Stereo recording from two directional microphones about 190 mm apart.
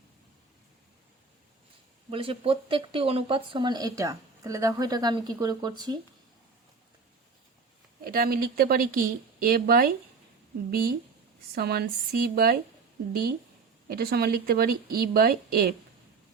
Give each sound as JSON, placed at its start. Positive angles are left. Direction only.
{"t": 2.0, "sound": "speech", "side_deg": -30}
{"t": 8.0, "sound": "speech", "side_deg": -50}
{"t": 13.8, "sound": "speech", "side_deg": -50}